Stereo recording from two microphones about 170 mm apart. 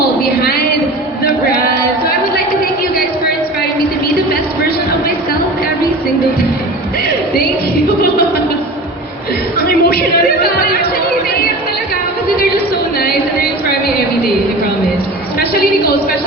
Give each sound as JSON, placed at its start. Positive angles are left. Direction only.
{"t": 9.6, "sound": "chatter", "side_deg": 60}
{"t": 13.0, "sound": "music", "side_deg": 65}